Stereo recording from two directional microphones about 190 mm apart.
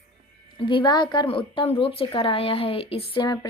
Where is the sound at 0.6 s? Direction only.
25° left (ahead or behind).